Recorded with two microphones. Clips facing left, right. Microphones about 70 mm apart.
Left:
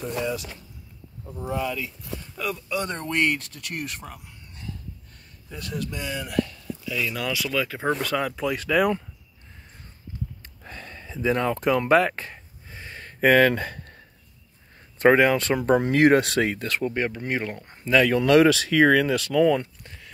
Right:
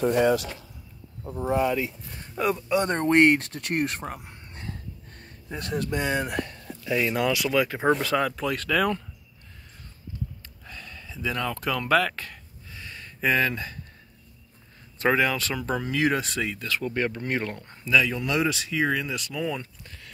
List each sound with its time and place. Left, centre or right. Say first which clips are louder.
0.0 s speech: right 7 dB; right
1.3 s speech: right 4 dB; right
7.2 s speech: right 3 dB; centre
10.6 s a sound: left 3 dB; left
15.0 s speech: left 6 dB; left
16.8 s speech: left 1 dB; centre
17.8 s speech: left 3 dB; left
18.1 s speech: left 9 dB; left